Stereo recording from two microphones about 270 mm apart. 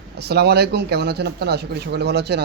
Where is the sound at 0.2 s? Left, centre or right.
Right.